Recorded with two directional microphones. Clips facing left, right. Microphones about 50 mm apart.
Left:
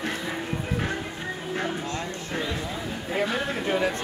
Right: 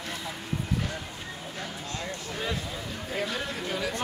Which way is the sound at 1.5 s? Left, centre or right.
Left.